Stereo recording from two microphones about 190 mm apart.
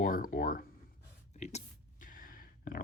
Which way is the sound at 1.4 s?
35° left (ahead or behind).